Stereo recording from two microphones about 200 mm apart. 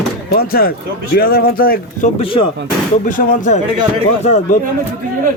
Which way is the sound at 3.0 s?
40° left (ahead or behind).